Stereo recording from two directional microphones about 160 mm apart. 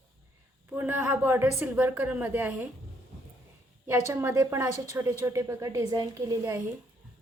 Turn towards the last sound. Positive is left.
turn(degrees=-20)  # may be behind; listen again after turning